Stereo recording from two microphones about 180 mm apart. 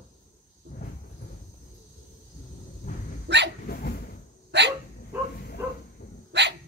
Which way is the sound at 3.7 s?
55° left (ahead or behind).